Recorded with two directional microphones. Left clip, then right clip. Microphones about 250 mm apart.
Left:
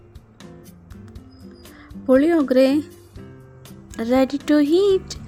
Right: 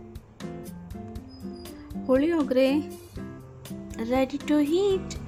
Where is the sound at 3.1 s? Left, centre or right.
Centre.